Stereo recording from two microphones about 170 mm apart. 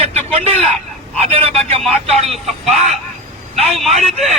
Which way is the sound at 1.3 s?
35° right (ahead or behind).